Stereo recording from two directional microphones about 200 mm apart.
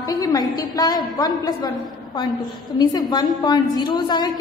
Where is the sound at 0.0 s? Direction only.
20° left (ahead or behind).